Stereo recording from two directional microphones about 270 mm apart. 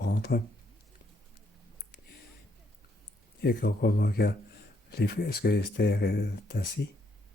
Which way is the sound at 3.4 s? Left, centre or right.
Left.